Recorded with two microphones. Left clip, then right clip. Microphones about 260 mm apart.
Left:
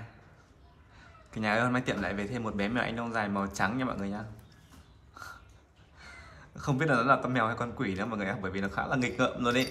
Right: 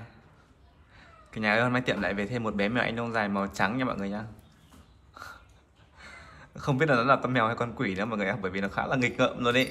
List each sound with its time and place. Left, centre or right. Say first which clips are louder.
0.9 s a man's voice: right 2 dB; centre
5.1 s crow: right 1 dB; centre
5.9 s a man's voice: right 2 dB; centre